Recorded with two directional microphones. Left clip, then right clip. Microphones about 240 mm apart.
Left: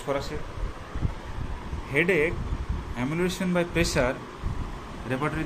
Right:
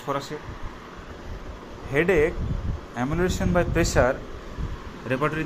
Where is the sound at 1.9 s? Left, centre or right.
Centre.